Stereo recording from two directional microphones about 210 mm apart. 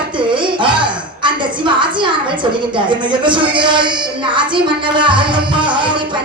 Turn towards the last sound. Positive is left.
turn(degrees=-20)  # may be behind; listen again after turning